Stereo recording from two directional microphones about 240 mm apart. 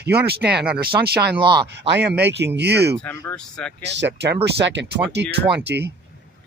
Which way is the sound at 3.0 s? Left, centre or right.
Centre.